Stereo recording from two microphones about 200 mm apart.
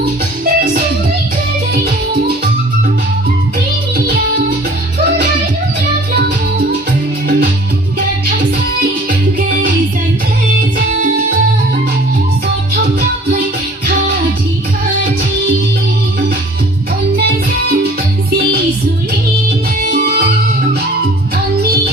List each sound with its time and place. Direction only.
0.4 s music: 50° right (ahead or behind)
3.9 s music: 50° right (ahead or behind)
6.1 s music: 55° right (ahead or behind)
20.0 s music: 55° right (ahead or behind)